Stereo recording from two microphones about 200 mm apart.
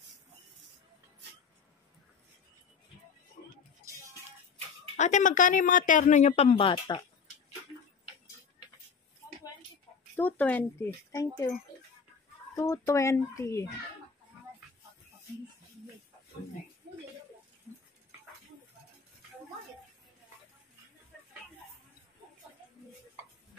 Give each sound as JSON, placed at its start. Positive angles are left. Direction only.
{"t": 4.9, "sound": "speech", "side_deg": 35}
{"t": 6.7, "sound": "speech", "side_deg": 20}
{"t": 10.1, "sound": "speech", "side_deg": 10}
{"t": 12.5, "sound": "speech", "side_deg": 15}